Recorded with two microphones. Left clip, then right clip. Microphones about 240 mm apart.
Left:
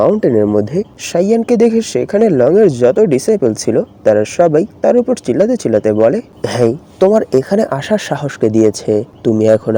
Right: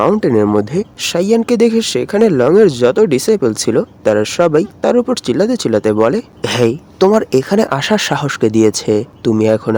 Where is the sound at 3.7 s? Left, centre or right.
Centre.